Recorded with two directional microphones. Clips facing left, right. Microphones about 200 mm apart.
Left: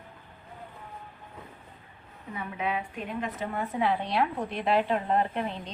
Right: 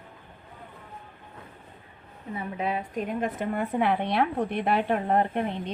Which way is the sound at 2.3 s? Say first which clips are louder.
Right 2 dB; 35° right (ahead or behind).